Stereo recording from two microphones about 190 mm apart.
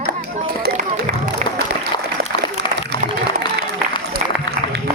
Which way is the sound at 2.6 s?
65° right (ahead or behind).